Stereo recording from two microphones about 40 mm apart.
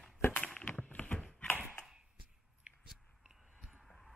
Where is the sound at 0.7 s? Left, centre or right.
Left.